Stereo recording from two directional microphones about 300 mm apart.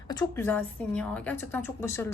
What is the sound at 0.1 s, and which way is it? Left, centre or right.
A woman's voice, centre.